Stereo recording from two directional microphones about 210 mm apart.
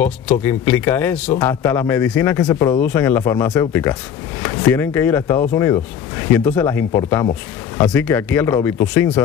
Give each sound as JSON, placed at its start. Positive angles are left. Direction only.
{"t": 0.0, "sound": "speech", "side_deg": 10}